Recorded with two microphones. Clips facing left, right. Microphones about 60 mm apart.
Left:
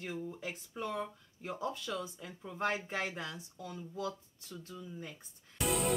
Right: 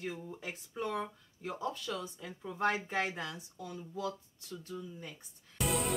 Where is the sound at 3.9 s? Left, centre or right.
Centre.